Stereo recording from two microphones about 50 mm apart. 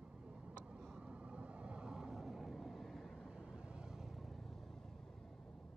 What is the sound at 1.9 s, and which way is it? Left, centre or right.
Vehicle, centre.